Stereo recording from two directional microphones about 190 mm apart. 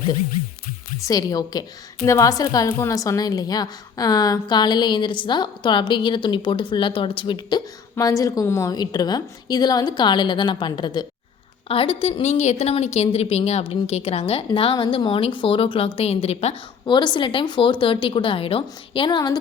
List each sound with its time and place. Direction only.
0.9 s a woman's voice: 20° left (ahead or behind)